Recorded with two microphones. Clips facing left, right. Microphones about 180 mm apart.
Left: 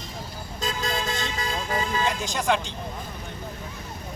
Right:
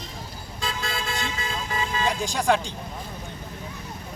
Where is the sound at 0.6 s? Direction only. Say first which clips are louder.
Left 2 dB; 40° left (ahead or behind).